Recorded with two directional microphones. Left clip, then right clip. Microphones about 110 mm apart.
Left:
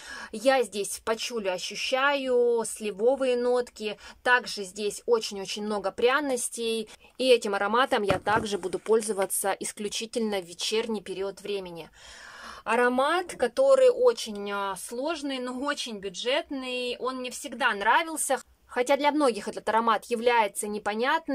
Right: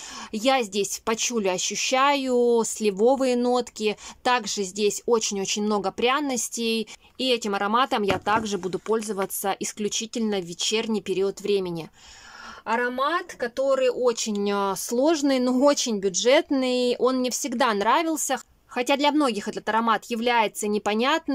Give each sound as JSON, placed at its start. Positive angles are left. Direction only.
{"t": 0.3, "sound": "speech", "side_deg": -15}
{"t": 1.1, "sound": "speech", "side_deg": -25}
{"t": 7.2, "sound": "speech", "side_deg": 0}
{"t": 11.1, "sound": "speech", "side_deg": -30}
{"t": 12.6, "sound": "speech", "side_deg": 10}
{"t": 14.0, "sound": "speech", "side_deg": -25}
{"t": 14.3, "sound": "speech", "side_deg": -50}
{"t": 17.7, "sound": "speech", "side_deg": -35}
{"t": 18.2, "sound": "speech", "side_deg": -5}